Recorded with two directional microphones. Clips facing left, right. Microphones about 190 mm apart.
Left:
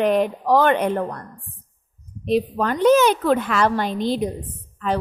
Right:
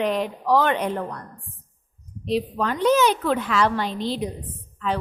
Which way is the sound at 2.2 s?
50° left (ahead or behind).